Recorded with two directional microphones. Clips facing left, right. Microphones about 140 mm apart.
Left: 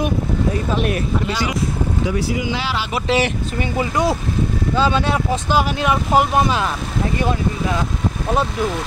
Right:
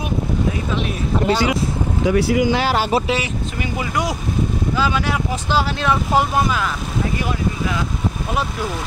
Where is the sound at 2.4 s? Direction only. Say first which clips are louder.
Right 5 dB; 45° right (ahead or behind).